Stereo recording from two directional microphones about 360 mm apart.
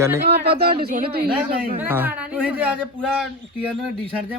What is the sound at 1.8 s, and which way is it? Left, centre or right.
Speech, centre.